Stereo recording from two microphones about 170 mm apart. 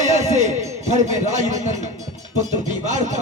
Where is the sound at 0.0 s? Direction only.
45° right (ahead or behind).